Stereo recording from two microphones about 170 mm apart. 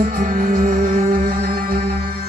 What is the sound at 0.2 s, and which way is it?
Music, 50° right (ahead or behind).